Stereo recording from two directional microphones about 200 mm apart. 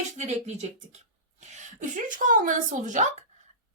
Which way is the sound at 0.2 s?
35° right (ahead or behind).